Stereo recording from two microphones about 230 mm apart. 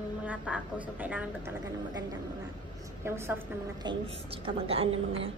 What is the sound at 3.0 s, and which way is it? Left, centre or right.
Speech, centre.